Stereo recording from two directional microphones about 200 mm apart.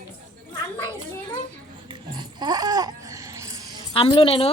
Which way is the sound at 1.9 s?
20° right (ahead or behind).